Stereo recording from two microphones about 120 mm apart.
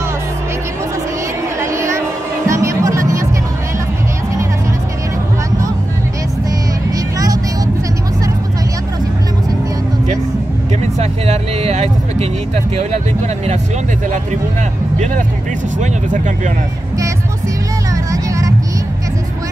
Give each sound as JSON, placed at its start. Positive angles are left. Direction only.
{"t": 1.6, "sound": "music", "side_deg": -25}
{"t": 7.2, "sound": "vehicle", "side_deg": -30}
{"t": 11.0, "sound": "vehicle", "side_deg": -65}
{"t": 15.8, "sound": "vehicle", "side_deg": -90}
{"t": 18.1, "sound": "a sound", "side_deg": -25}